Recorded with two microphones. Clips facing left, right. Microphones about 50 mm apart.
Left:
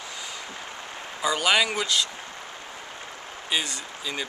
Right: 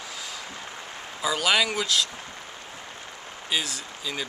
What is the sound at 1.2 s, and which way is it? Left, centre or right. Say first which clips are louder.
Speech: left 1 dB; centre.